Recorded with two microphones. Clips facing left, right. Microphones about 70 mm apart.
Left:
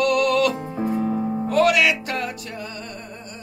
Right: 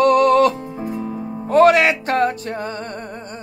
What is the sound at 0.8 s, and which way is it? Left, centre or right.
Music, left.